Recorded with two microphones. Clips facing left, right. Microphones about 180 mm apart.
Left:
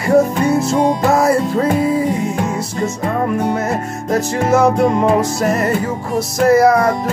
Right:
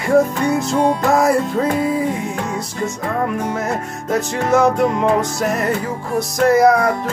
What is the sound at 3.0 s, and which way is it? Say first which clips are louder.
Music: left 1 dB; 15° left (ahead or behind).